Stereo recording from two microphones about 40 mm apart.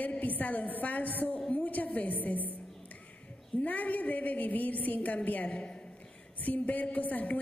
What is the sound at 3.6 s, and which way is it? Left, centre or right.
A woman's voice, left.